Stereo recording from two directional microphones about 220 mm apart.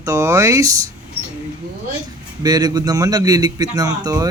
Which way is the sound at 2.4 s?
15° right (ahead or behind).